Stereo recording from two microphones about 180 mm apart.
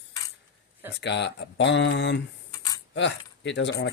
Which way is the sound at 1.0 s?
70° left (ahead or behind).